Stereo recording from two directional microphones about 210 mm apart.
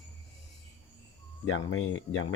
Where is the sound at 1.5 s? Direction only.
70° left (ahead or behind).